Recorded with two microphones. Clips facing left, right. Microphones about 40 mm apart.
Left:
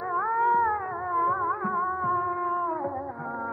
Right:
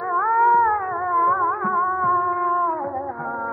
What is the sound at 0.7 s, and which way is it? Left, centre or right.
Music, right.